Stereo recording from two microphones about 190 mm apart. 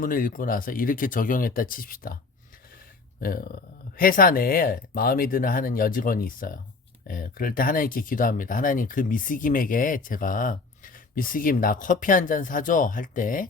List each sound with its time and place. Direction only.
0.0 s speech: 45° left (ahead or behind)
3.2 s speech: 50° left (ahead or behind)